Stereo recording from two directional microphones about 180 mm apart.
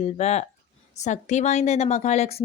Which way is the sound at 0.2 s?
40° left (ahead or behind).